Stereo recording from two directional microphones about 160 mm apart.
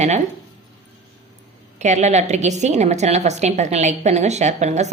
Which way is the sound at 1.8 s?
45° right (ahead or behind).